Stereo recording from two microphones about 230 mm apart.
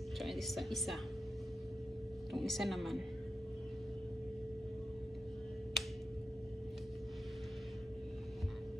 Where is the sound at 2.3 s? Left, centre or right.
Centre.